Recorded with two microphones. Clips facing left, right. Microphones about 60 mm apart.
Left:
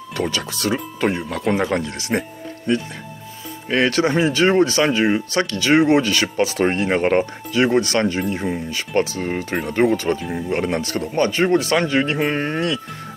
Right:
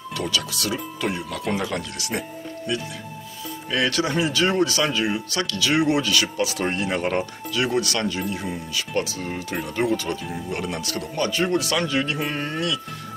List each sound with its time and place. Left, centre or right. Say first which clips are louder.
0.1 s speech: left 3 dB; left